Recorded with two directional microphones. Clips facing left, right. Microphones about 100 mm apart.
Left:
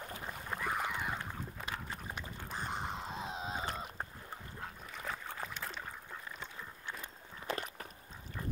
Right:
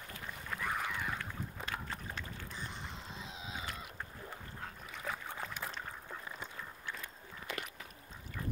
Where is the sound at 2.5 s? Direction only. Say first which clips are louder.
Left 6 dB; 50° left (ahead or behind); by 4.0 s 35° left (ahead or behind).